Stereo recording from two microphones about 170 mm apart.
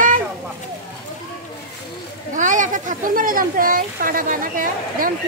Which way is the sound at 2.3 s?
50° right (ahead or behind).